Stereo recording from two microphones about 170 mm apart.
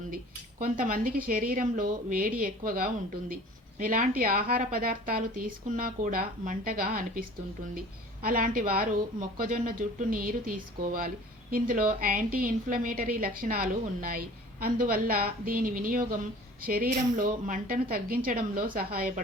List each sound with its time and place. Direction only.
0.6 s a woman's voice: 55° right (ahead or behind)